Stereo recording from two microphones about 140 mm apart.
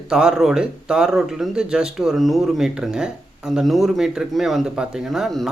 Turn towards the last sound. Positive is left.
turn(degrees=0)  # may be behind; listen again after turning